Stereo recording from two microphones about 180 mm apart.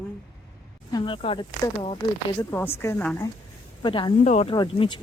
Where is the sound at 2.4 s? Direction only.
10° left (ahead or behind).